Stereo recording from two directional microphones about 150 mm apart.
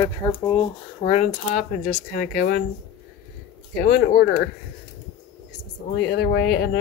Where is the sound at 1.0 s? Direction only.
50° left (ahead or behind); by 2.6 s 90° left.